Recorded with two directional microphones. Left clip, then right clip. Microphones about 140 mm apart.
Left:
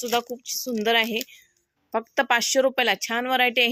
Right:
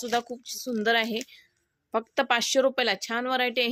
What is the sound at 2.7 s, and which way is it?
Speech, 20° left (ahead or behind).